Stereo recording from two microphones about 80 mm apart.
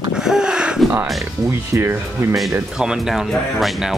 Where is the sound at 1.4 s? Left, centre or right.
Right.